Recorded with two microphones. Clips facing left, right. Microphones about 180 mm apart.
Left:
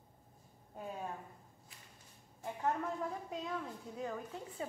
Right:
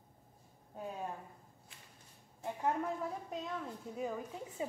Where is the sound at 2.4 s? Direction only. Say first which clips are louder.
Right 1 dB; 15° right (ahead or behind).